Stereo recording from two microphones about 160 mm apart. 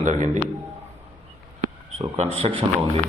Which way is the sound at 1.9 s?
40° right (ahead or behind).